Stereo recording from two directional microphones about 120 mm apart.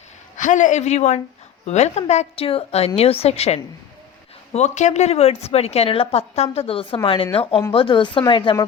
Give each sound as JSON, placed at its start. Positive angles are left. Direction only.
{"t": 0.3, "sound": "a woman's voice", "side_deg": 90}
{"t": 4.5, "sound": "a woman's voice", "side_deg": 75}